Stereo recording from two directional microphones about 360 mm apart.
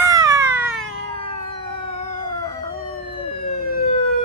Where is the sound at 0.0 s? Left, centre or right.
Centre.